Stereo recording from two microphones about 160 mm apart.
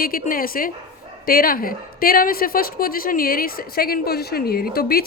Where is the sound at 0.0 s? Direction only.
65° left (ahead or behind).